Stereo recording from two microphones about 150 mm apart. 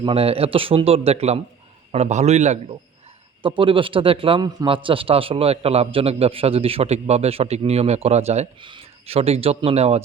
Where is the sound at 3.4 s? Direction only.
35° right (ahead or behind).